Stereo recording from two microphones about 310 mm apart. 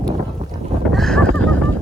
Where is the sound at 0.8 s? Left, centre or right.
Centre.